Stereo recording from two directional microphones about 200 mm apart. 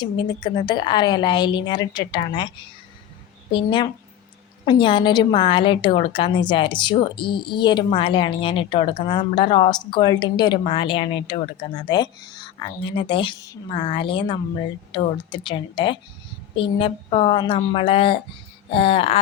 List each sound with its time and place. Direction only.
0.0 s a woman's voice: 20° left (ahead or behind)
3.5 s a woman's voice: 25° left (ahead or behind)